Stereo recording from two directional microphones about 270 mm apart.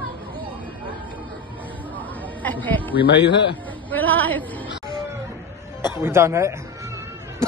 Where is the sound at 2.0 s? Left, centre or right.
Centre.